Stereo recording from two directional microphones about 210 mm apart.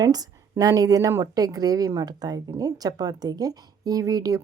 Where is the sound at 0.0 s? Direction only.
15° right (ahead or behind).